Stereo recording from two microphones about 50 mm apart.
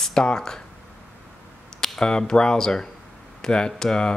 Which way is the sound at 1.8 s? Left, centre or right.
Centre.